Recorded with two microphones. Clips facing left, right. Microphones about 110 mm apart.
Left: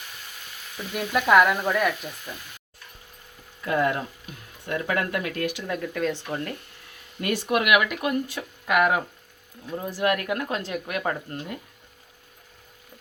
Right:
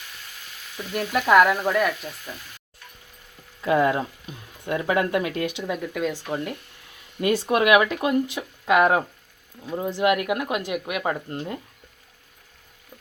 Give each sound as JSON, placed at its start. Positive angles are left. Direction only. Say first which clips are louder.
{"t": 0.9, "sound": "frying", "louder": "right 1 dB", "side_deg": 0}
{"t": 3.6, "sound": "speech", "louder": "right 4 dB", "side_deg": -20}
{"t": 7.2, "sound": "speech", "louder": "right 4 dB", "side_deg": -25}